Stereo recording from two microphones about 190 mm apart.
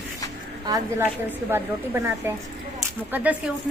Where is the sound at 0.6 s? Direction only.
20° right (ahead or behind).